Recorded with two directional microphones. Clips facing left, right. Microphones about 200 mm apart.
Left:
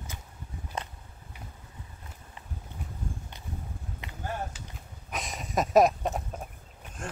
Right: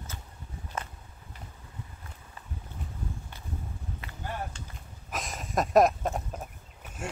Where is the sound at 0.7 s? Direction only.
15° left (ahead or behind).